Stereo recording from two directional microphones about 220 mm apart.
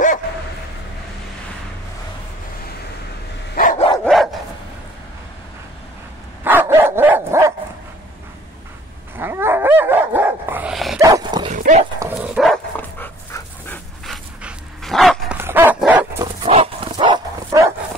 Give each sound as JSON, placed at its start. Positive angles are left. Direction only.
{"t": 3.5, "sound": "dog", "side_deg": 35}
{"t": 4.0, "sound": "dog", "side_deg": 0}
{"t": 6.4, "sound": "dog", "side_deg": -10}
{"t": 9.1, "sound": "dog", "side_deg": -10}
{"t": 11.0, "sound": "dog", "side_deg": -15}
{"t": 11.4, "sound": "dog", "side_deg": -35}
{"t": 12.2, "sound": "dog", "side_deg": 0}
{"t": 16.4, "sound": "dog", "side_deg": -25}